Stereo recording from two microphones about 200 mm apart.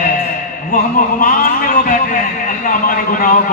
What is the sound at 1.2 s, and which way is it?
A man's voice, 45° left (ahead or behind).